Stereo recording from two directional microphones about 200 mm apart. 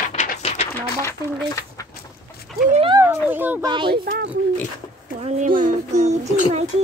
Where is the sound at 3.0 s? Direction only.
10° right (ahead or behind).